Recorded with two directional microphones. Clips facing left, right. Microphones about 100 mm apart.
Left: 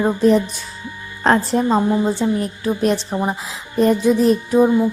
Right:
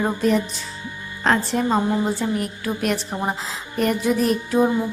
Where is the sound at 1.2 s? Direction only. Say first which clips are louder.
Left 4 dB; 35° left (ahead or behind).